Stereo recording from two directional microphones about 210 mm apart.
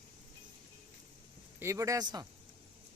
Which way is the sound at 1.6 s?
15° right (ahead or behind).